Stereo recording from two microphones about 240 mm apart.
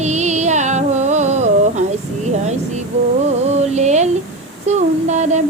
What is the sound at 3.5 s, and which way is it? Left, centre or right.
Music, right.